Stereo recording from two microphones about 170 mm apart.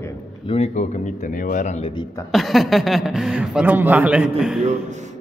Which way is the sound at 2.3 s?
Centre (ahead or behind).